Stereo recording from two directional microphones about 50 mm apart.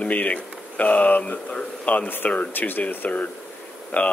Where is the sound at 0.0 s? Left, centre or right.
Left.